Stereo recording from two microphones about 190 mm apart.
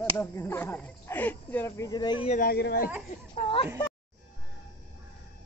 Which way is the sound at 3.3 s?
30° left (ahead or behind).